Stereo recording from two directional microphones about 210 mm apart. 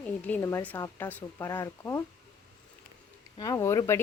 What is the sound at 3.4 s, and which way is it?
Speech, 15° left (ahead or behind).